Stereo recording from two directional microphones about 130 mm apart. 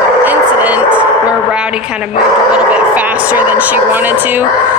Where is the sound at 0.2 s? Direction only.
15° right (ahead or behind).